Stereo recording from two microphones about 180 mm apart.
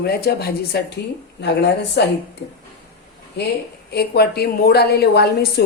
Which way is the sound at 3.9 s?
60° left (ahead or behind).